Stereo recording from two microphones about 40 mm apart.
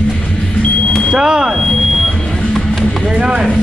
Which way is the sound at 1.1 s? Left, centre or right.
Centre.